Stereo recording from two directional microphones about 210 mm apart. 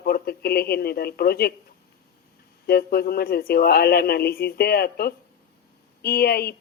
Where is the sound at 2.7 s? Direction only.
45° left (ahead or behind).